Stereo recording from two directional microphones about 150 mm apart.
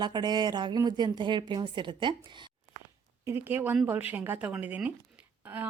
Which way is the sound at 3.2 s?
15° right (ahead or behind).